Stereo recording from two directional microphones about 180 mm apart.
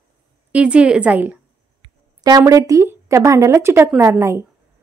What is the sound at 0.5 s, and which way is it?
Speech, 5° right (ahead or behind).